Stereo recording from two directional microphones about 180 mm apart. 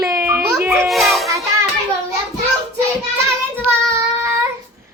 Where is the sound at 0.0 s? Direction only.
15° right (ahead or behind).